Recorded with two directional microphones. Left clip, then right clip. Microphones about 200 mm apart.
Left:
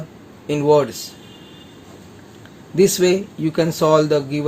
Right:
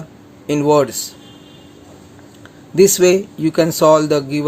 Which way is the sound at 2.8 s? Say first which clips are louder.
Right 4 dB; 25° right (ahead or behind).